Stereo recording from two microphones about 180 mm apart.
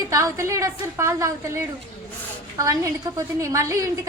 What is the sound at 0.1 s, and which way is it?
A woman's voice, 15° right (ahead or behind).